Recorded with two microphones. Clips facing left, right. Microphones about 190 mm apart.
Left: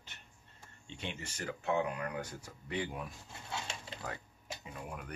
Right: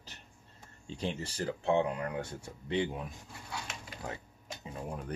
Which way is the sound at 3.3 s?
25° left (ahead or behind).